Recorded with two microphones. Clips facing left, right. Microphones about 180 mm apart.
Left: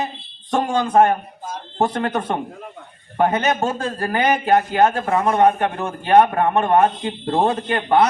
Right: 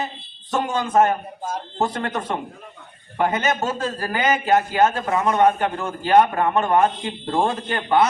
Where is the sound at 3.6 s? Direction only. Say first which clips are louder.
Left 2 dB; 25° left (ahead or behind).